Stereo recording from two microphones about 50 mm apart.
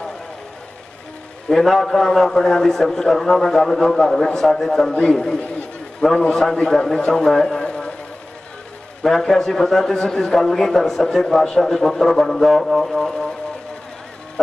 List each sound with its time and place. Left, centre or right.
1.5 s a man's voice: centre
7.6 s a sound: left
9.0 s a man's voice: centre